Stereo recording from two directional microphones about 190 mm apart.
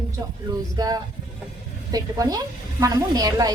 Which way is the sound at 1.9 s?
20° right (ahead or behind).